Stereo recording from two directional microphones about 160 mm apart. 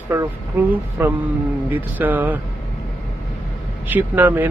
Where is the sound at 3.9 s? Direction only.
10° right (ahead or behind).